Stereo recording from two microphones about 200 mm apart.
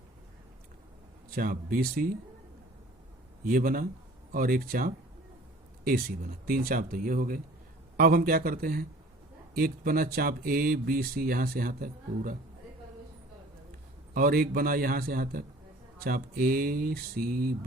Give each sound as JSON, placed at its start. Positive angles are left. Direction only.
{"t": 1.4, "sound": "speech", "side_deg": -45}
{"t": 3.4, "sound": "speech", "side_deg": -45}
{"t": 14.1, "sound": "speech", "side_deg": -45}